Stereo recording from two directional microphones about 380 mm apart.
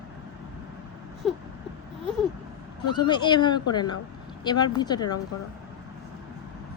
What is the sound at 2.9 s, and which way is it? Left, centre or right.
Speech, centre.